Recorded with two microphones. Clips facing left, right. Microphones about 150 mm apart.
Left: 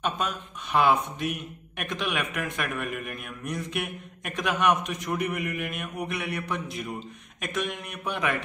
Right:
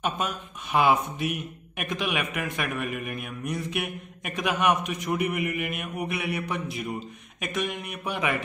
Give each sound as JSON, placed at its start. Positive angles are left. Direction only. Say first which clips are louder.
{"t": 0.0, "sound": "a man's voice", "louder": "even", "side_deg": -5}